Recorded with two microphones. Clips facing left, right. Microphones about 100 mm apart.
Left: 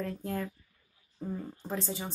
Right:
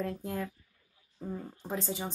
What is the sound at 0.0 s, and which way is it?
A woman's voice, 5° right (ahead or behind).